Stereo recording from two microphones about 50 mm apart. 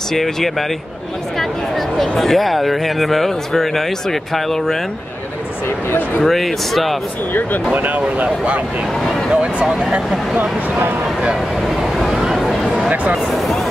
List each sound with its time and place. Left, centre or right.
0.1 s speech: centre
6.2 s speech: centre
7.7 s speech: right
11.7 s a sound: centre